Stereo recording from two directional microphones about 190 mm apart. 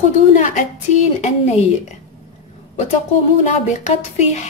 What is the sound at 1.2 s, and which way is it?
Speech, 35° left (ahead or behind).